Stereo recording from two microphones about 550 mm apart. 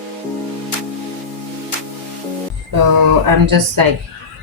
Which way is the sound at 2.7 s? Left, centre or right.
Right.